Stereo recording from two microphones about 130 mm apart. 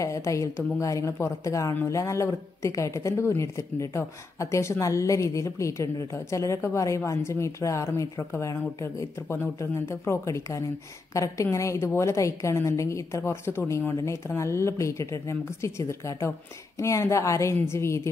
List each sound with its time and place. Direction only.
0.0 s a woman's voice: 25° left (ahead or behind)